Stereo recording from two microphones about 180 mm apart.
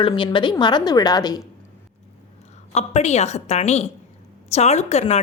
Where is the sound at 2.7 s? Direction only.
40° left (ahead or behind).